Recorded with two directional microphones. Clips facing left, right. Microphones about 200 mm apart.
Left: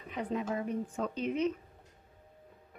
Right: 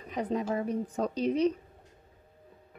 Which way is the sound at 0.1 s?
35° right (ahead or behind).